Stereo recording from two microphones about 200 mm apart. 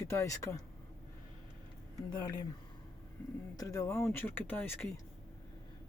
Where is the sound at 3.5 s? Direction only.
15° left (ahead or behind).